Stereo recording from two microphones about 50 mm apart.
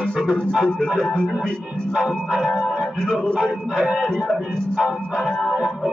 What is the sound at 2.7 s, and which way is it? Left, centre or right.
Music, centre.